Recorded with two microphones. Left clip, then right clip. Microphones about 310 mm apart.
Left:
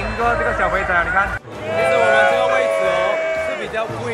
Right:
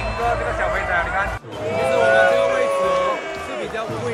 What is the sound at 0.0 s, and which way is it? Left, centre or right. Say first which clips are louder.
Music: left 3 dB; centre.